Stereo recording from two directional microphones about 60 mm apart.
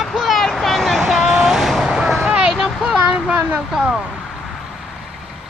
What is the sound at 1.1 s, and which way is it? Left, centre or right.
Vehicle, centre.